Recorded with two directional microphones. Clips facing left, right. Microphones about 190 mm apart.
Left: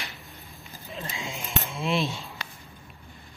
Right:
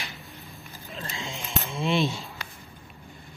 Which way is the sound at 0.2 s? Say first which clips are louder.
Right 2 dB; centre (ahead or behind).